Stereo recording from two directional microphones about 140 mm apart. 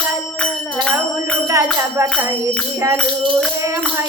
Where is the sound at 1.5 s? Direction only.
20° right (ahead or behind).